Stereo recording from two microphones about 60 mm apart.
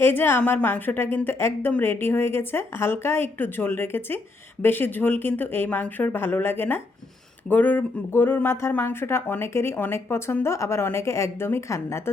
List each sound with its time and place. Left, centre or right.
0.0 s a woman's voice: left